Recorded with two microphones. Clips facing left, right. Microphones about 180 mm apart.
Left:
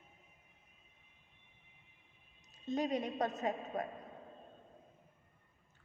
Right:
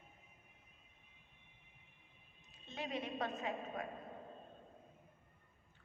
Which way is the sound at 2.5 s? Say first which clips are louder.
Left 9 dB; 40° left (ahead or behind).